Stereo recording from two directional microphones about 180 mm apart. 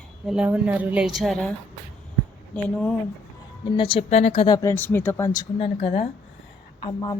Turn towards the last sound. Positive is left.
turn(degrees=25)  # may be behind; listen again after turning